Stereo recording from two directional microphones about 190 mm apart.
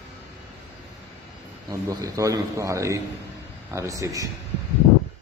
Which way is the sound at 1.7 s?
20° right (ahead or behind).